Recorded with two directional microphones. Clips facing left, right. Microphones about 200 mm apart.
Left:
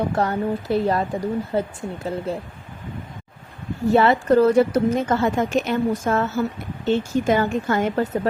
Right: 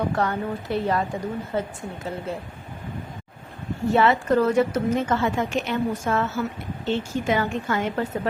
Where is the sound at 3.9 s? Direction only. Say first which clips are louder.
Left 3 dB; 35° left (ahead or behind).